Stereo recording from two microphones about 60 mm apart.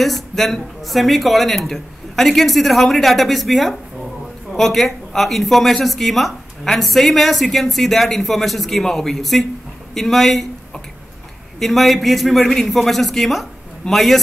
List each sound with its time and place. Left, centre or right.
0.0 s speech: centre